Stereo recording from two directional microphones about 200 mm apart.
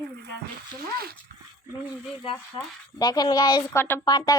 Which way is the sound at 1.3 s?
50° right (ahead or behind).